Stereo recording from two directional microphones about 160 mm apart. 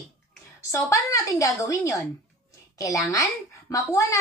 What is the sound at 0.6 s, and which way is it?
A woman's voice, 20° left (ahead or behind).